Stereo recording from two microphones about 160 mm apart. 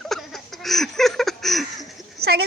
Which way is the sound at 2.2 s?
90° right.